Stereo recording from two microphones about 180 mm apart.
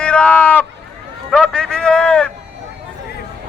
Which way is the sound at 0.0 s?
5° left (ahead or behind).